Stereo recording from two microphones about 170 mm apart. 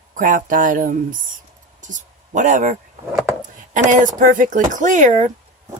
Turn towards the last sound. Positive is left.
turn(degrees=-50)  # may be behind; listen again after turning